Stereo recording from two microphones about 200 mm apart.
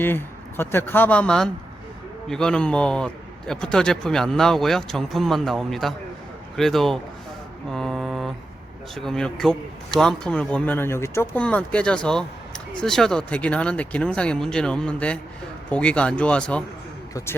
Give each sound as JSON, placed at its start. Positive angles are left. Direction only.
{"t": 0.0, "sound": "a man's voice", "side_deg": 10}
{"t": 7.7, "sound": "mantra", "side_deg": 0}
{"t": 9.0, "sound": "a man's voice", "side_deg": 5}